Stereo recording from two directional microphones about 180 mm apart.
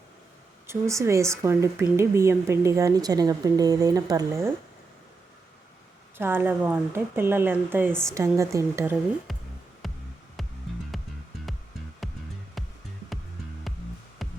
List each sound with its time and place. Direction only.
0.7 s speech: 15° right (ahead or behind)
6.1 s speech: 10° right (ahead or behind)
9.3 s music: centre (ahead or behind)